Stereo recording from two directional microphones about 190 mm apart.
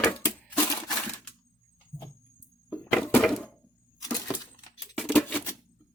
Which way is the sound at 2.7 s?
5° left (ahead or behind).